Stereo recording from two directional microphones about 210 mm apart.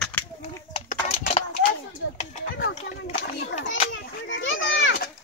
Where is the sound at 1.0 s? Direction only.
30° left (ahead or behind).